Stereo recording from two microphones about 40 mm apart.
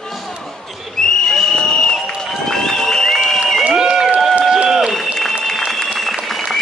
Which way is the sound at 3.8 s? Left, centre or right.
Centre.